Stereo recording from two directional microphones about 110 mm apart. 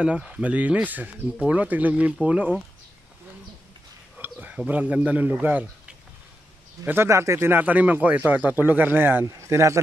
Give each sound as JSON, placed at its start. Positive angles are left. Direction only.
{"t": 0.0, "sound": "speech", "side_deg": -10}
{"t": 4.2, "sound": "a man's voice", "side_deg": -15}